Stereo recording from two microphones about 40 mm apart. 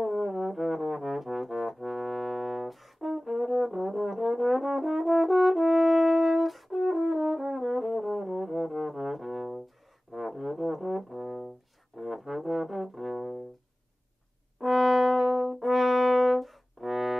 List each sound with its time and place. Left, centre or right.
0.0 s brass instrument: centre
12.0 s music: centre
14.6 s brass instrument: centre